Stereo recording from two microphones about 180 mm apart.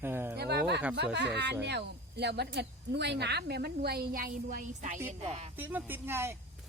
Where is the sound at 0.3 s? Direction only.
65° right (ahead or behind).